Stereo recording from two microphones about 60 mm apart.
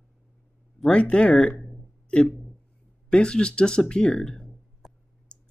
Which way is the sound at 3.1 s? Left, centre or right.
Centre.